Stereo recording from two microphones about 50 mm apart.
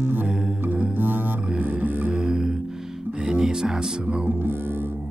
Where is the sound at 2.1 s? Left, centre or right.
Centre.